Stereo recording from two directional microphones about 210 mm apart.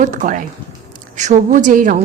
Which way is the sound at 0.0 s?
40° right (ahead or behind).